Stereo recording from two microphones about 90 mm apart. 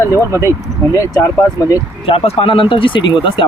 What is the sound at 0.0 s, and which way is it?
Speech, 35° left (ahead or behind).